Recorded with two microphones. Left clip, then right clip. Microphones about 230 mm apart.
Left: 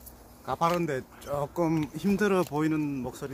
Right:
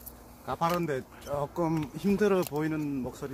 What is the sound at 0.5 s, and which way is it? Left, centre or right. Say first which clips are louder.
Speech: left 2 dB; left.